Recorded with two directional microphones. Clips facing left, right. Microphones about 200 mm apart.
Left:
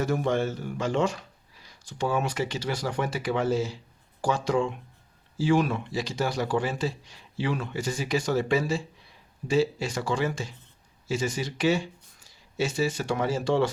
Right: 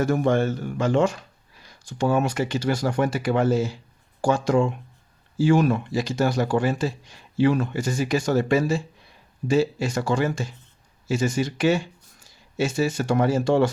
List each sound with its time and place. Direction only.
0.0 s speech: 50° right (ahead or behind)